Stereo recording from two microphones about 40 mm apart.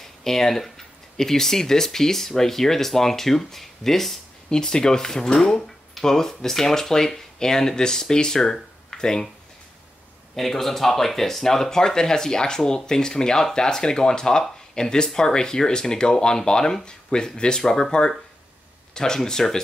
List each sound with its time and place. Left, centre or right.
0.0 s speech: centre
4.5 s speech: centre
10.3 s speech: centre